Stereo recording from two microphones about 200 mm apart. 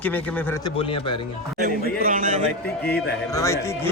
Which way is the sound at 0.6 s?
25° left (ahead or behind).